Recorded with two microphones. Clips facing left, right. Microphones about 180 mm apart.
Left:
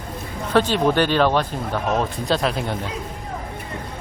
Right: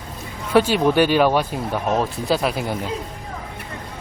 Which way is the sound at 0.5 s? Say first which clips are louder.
Right 2 dB; 10° right (ahead or behind).